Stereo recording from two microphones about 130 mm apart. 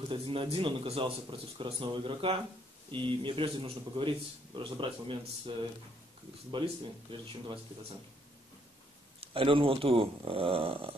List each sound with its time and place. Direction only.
0.1 s speech: 45° right (ahead or behind)
9.2 s speech: 45° right (ahead or behind)